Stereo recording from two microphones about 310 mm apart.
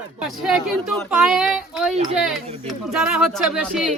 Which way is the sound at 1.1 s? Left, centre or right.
Centre.